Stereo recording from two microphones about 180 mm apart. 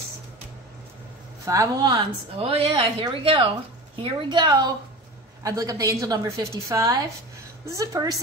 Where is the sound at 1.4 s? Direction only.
20° right (ahead or behind).